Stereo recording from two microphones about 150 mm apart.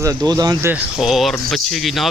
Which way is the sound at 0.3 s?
25° right (ahead or behind).